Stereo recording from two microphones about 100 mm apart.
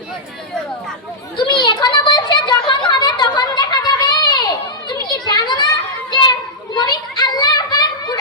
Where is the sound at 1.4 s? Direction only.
50° left (ahead or behind).